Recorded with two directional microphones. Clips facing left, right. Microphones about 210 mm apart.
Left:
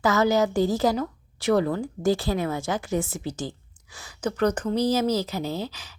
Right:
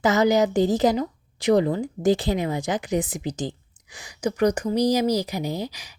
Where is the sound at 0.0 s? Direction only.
20° right (ahead or behind).